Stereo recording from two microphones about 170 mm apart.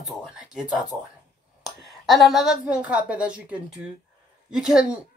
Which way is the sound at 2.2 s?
Centre (ahead or behind).